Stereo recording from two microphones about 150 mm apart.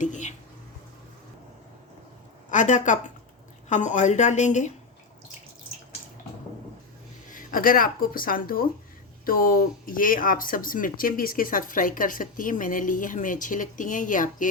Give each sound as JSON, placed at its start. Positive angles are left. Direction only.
{"t": 0.0, "sound": "a sound", "side_deg": 55}
{"t": 2.5, "sound": "a woman's voice", "side_deg": 55}
{"t": 7.3, "sound": "speech", "side_deg": 65}